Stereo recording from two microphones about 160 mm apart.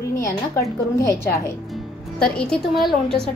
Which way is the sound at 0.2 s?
20° left (ahead or behind).